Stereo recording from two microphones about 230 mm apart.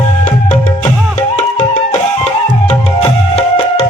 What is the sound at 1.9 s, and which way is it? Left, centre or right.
Music, left.